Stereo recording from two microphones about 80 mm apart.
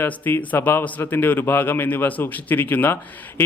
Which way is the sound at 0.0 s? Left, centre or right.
Left.